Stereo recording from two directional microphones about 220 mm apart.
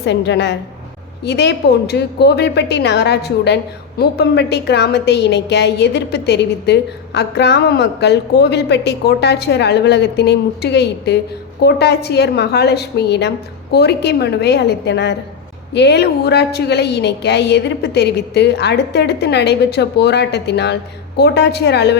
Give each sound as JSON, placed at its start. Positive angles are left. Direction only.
{"t": 0.0, "sound": "a woman's voice", "side_deg": 50}